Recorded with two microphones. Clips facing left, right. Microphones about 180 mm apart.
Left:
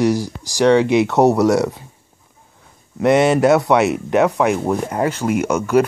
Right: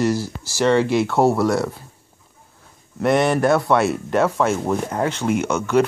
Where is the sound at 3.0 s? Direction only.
20° left (ahead or behind).